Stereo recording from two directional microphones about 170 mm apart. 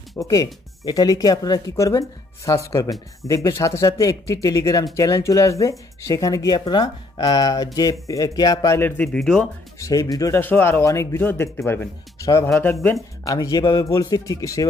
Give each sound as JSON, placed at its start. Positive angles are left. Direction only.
{"t": 0.2, "sound": "speech", "side_deg": 20}
{"t": 9.8, "sound": "speech", "side_deg": 20}